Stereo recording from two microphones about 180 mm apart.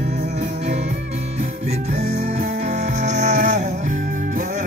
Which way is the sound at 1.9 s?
35° right (ahead or behind).